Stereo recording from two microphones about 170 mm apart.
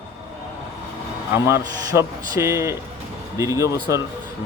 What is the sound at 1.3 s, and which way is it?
Speech, 15° right (ahead or behind).